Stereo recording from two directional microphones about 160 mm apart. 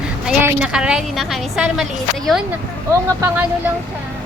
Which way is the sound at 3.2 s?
10° right (ahead or behind).